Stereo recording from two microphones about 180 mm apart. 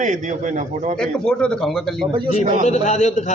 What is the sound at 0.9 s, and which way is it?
Speech, 5° left (ahead or behind).